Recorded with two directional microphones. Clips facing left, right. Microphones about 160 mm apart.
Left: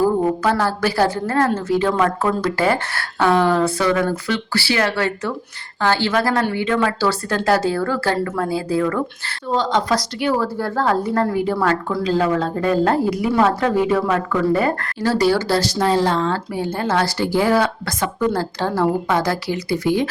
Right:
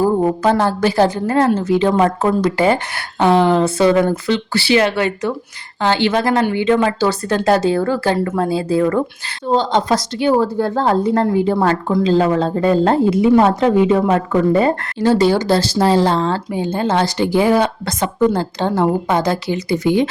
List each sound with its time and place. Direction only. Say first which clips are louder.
0.0 s a woman's voice: right 2 dB; 25° right (ahead or behind)
16.6 s a woman's voice: right 3 dB; 20° right (ahead or behind)